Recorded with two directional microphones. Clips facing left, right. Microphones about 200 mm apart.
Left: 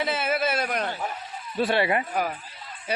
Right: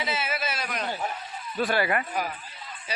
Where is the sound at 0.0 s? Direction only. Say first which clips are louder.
Left 5 dB; 55° left (ahead or behind).